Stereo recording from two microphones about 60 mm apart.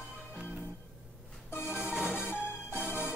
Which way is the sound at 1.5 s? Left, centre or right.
Left.